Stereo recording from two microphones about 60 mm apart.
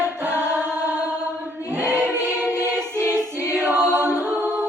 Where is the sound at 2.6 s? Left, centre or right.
Right.